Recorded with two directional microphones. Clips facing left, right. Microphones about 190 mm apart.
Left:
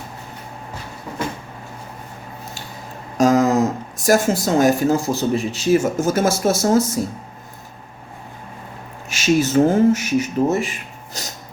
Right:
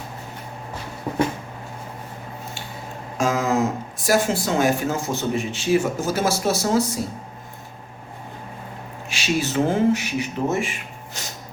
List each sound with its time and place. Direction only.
3.2 s speech: 40° left (ahead or behind)
9.0 s speech: 45° left (ahead or behind)